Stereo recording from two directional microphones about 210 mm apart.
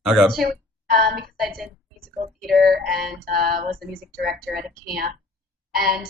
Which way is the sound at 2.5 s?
45° right (ahead or behind).